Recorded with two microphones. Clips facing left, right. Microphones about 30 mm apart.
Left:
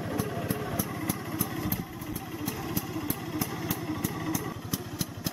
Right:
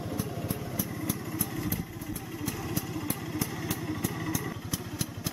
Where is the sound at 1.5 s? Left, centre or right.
Centre.